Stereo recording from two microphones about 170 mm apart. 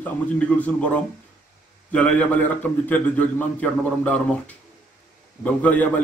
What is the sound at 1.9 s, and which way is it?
A man's voice, 10° left (ahead or behind).